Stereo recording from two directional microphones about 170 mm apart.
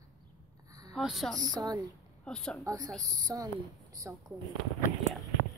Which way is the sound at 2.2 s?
5° left (ahead or behind).